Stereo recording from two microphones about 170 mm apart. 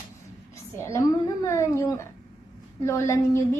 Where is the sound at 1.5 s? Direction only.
15° left (ahead or behind).